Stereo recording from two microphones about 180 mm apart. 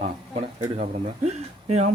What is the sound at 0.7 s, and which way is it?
Speech, 35° right (ahead or behind).